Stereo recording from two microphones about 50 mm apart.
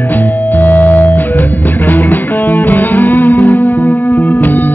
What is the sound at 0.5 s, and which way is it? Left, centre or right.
Music, left.